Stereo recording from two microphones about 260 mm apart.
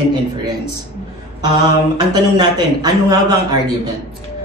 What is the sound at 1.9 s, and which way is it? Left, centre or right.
A man's voice, centre.